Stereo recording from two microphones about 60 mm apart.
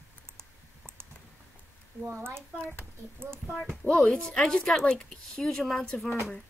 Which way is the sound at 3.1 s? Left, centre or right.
Right.